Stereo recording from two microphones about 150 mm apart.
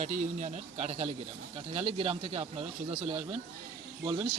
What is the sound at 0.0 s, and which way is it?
A man's voice, 55° right (ahead or behind).